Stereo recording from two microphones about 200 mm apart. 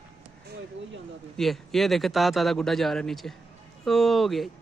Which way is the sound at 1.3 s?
Centre (ahead or behind).